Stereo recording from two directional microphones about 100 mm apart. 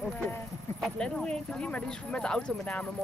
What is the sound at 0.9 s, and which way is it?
Speech, 10° left (ahead or behind).